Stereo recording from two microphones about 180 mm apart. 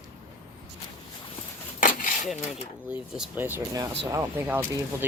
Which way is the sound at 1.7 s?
45° left (ahead or behind).